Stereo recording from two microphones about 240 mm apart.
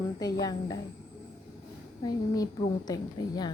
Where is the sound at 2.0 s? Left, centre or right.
Centre.